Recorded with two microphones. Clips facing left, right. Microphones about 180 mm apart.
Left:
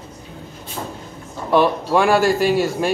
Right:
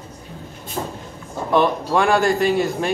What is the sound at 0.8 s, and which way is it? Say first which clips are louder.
Vehicle: right 3 dB; 35° right (ahead or behind).